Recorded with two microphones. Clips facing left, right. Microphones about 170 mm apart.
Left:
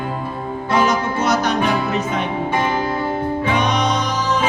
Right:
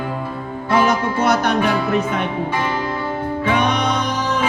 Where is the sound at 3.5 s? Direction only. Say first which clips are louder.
Right 2 dB; 55° right (ahead or behind).